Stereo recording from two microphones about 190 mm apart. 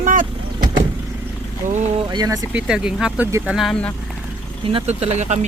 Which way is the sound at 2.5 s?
5° right (ahead or behind).